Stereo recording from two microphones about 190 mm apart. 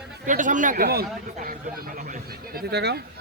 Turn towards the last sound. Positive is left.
turn(degrees=-60)  # may be behind; listen again after turning